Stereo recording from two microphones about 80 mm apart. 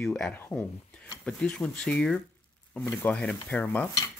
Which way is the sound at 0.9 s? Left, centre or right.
Centre.